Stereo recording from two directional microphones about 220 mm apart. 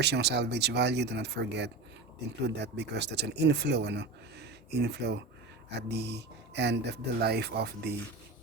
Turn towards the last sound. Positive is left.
turn(degrees=-50)  # may be behind; listen again after turning